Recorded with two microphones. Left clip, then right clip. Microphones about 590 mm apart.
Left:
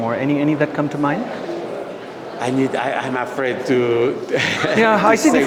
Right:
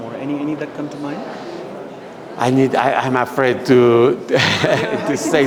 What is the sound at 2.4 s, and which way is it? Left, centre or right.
A man's voice, right.